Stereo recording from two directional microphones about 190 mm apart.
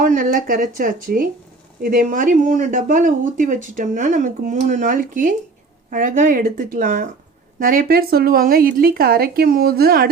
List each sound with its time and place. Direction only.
0.0 s speech: 45° right (ahead or behind)